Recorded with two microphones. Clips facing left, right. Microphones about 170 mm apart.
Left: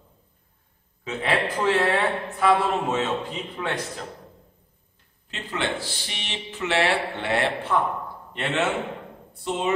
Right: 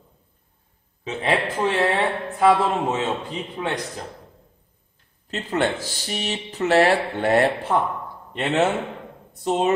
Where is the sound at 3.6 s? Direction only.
25° right (ahead or behind).